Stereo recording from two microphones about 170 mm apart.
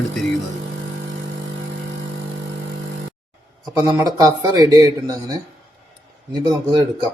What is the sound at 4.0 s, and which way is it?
Speech, 20° right (ahead or behind).